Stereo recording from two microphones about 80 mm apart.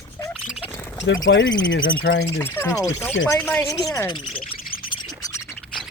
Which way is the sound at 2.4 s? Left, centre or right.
Left.